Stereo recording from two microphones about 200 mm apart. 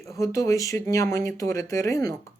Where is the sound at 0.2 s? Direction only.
15° left (ahead or behind).